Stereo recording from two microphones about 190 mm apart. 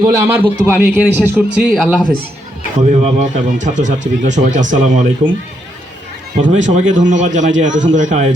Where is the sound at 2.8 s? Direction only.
40° right (ahead or behind).